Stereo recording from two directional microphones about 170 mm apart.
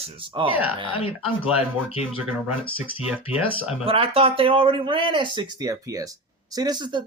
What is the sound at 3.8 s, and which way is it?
Speech, 35° right (ahead or behind).